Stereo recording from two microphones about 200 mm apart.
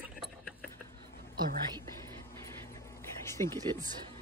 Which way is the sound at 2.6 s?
15° left (ahead or behind).